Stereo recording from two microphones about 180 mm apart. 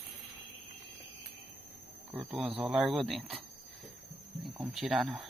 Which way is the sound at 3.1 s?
35° right (ahead or behind).